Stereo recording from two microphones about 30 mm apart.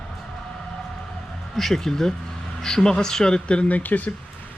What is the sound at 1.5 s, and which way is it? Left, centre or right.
Speech, centre.